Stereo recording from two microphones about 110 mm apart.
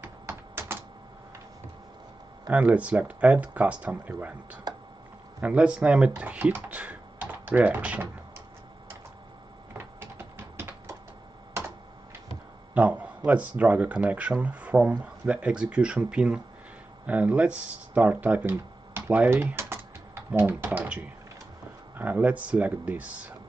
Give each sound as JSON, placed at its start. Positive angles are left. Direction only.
{"t": 0.0, "sound": "typing", "side_deg": -20}
{"t": 2.5, "sound": "speech", "side_deg": -15}
{"t": 9.8, "sound": "a sound", "side_deg": -20}
{"t": 12.7, "sound": "speech", "side_deg": -15}